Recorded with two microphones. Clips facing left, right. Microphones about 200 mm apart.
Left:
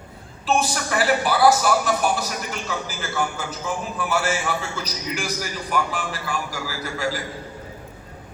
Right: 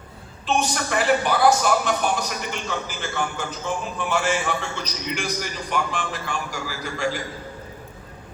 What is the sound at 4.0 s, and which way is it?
A man's voice, 5° left (ahead or behind).